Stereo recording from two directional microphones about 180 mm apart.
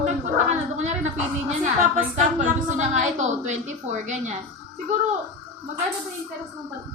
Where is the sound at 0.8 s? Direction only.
40° right (ahead or behind).